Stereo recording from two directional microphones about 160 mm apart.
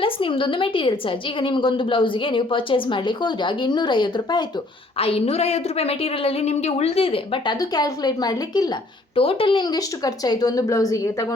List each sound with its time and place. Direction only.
0.0 s a woman's voice: 35° left (ahead or behind)
7.6 s a woman's voice: 25° left (ahead or behind)
9.1 s a woman's voice: 35° left (ahead or behind)